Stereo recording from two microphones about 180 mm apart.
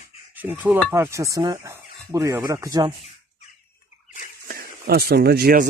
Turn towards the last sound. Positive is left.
turn(degrees=-60)  # may be behind; listen again after turning